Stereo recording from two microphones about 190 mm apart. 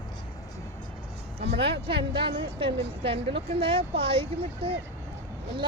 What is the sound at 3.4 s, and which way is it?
Speech, 30° right (ahead or behind).